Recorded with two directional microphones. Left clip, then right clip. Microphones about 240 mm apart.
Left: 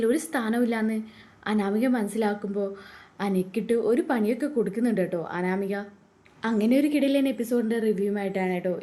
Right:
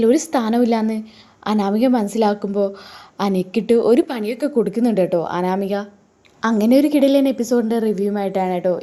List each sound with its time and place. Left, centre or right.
0.0 s a woman's voice: right